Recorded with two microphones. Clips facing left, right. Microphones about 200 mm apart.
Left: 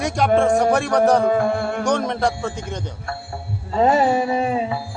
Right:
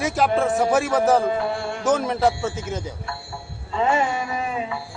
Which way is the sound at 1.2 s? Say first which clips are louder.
Left 5 dB; 50° left (ahead or behind).